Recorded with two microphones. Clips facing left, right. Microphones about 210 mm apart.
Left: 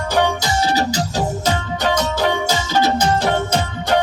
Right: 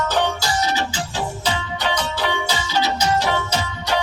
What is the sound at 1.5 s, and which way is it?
Music, 45° left (ahead or behind).